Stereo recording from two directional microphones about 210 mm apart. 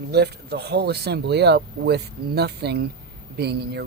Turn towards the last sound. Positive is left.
turn(degrees=-50)  # may be behind; listen again after turning